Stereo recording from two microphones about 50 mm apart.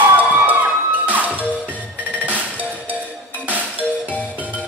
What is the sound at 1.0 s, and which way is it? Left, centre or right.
Music, right.